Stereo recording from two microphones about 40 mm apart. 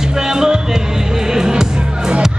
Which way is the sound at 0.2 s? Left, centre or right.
Centre.